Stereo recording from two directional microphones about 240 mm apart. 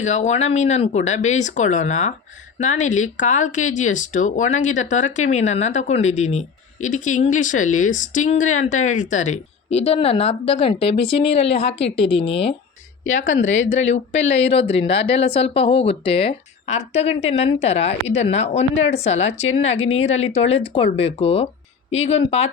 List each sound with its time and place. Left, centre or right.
0.0 s speech: left
13.6 s speech: left